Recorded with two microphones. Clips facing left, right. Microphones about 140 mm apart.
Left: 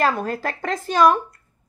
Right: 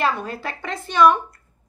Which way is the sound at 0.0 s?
45° left (ahead or behind).